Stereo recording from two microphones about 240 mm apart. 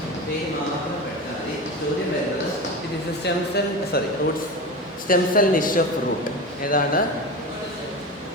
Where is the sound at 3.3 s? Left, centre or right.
Left.